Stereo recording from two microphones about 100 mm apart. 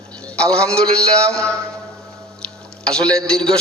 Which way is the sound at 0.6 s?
5° left (ahead or behind).